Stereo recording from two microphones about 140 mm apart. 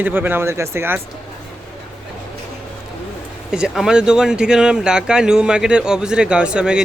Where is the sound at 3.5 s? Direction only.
5° right (ahead or behind).